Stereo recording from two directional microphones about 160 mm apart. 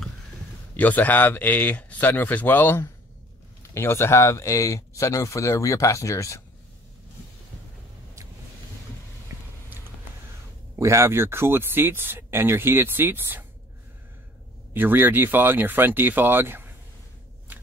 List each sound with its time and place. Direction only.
0.7 s speech: 10° left (ahead or behind)
10.8 s speech: 15° right (ahead or behind)
14.7 s speech: 10° right (ahead or behind)